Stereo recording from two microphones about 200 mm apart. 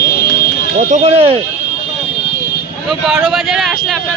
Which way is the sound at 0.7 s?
35° right (ahead or behind).